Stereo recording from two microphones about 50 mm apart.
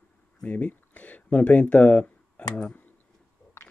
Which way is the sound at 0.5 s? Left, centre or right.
Left.